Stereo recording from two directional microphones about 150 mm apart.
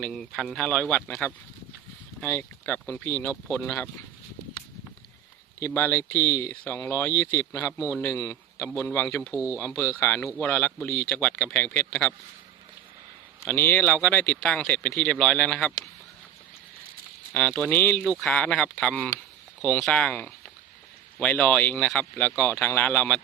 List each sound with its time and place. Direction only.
0.0 s speech: centre (ahead or behind)
5.5 s a man's voice: 15° left (ahead or behind)
9.3 s speech: 10° right (ahead or behind)
9.6 s speech: 20° left (ahead or behind)
13.4 s speech: 15° left (ahead or behind)
17.3 s speech: 10° left (ahead or behind)